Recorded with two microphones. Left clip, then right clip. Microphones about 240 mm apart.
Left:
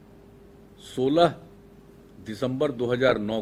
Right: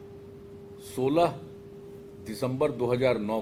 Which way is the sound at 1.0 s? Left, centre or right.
Left.